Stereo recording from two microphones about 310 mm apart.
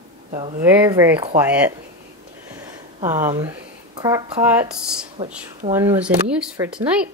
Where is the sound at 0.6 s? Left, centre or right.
Centre.